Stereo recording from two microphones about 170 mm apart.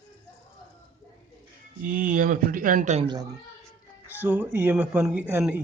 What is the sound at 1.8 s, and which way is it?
Speech, 55° right (ahead or behind).